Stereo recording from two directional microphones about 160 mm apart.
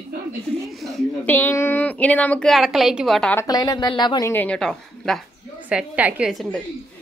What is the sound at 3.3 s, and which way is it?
A woman's voice, 20° left (ahead or behind).